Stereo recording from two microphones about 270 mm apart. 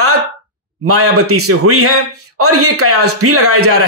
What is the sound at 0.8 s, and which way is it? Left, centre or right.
A man's voice, right.